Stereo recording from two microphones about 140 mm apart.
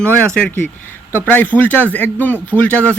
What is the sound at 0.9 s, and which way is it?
Speech, 15° left (ahead or behind).